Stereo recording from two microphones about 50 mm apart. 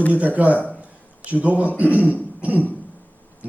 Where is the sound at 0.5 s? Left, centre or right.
Left.